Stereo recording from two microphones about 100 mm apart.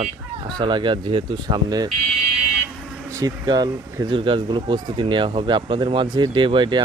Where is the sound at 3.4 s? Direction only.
45° right (ahead or behind).